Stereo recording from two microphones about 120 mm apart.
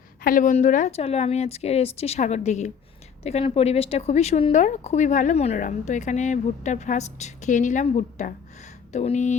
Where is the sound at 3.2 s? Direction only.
55° left (ahead or behind).